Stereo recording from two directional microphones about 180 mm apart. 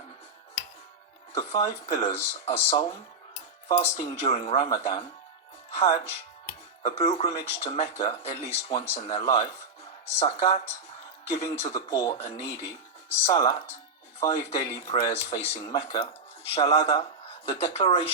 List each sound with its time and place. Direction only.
1.3 s speech: 30° left (ahead or behind)
11.4 s speech: 20° left (ahead or behind)
12.1 s speech: 30° left (ahead or behind)